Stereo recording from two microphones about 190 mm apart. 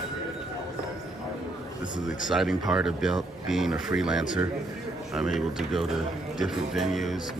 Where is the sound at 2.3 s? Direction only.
Centre (ahead or behind).